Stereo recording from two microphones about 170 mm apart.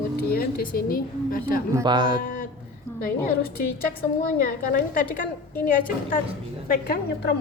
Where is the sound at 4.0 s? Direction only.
60° left (ahead or behind).